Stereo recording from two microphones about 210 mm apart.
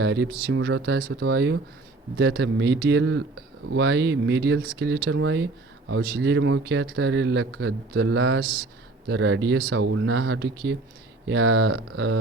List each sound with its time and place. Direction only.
0.0 s speech: 55° right (ahead or behind)